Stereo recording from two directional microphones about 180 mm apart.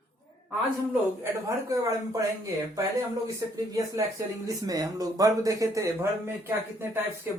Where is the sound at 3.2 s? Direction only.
15° right (ahead or behind).